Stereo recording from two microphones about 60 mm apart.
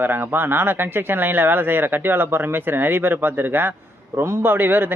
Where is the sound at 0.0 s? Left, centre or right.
Right.